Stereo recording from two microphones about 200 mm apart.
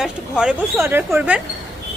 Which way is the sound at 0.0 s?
5° right (ahead or behind).